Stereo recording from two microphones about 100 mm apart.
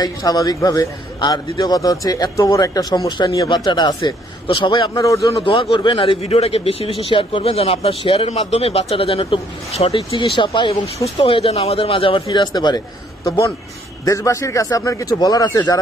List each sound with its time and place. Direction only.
0.0 s a man's voice: 40° left (ahead or behind)
5.0 s a man's voice: 35° left (ahead or behind)
5.4 s a man's voice: 60° left (ahead or behind); by 10.0 s 85° left
10.1 s a man's voice: 50° left (ahead or behind)